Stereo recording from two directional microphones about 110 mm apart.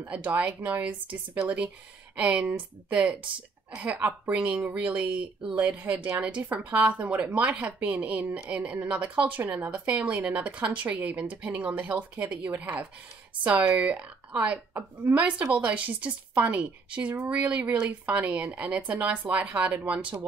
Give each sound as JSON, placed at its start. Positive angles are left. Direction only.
{"t": 0.0, "sound": "a woman's voice", "side_deg": -15}